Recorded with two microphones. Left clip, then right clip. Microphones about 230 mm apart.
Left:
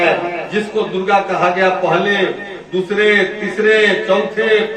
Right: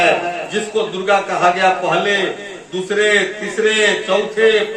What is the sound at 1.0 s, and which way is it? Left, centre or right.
A man's voice, right.